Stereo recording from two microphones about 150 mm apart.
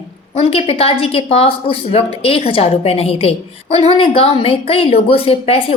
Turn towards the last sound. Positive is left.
turn(degrees=40)  # may be behind; listen again after turning